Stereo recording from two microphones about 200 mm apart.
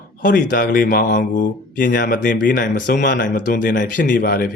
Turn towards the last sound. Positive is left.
turn(degrees=45)  # may be behind; listen again after turning